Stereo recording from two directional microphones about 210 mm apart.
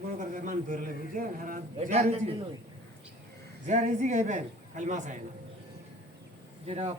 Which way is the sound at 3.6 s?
35° right (ahead or behind).